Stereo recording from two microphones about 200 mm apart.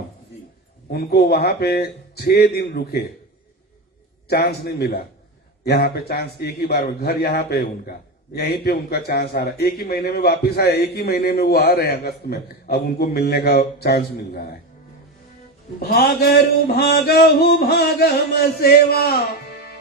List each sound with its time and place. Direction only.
0.9 s a man's voice: 55° left (ahead or behind)
4.3 s a man's voice: 55° left (ahead or behind)
15.8 s a man's voice: 50° left (ahead or behind)